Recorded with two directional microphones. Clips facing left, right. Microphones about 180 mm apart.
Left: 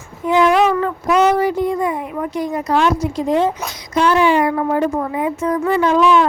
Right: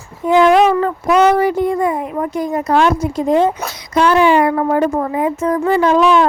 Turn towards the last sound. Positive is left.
turn(degrees=-35)  # may be behind; listen again after turning